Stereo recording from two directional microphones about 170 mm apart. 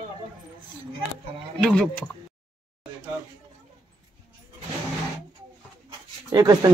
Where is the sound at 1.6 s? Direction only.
5° left (ahead or behind).